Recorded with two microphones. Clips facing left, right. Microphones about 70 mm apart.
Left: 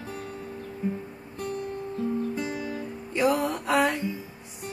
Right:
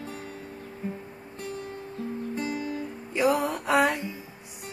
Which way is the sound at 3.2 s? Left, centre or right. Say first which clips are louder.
Even; centre.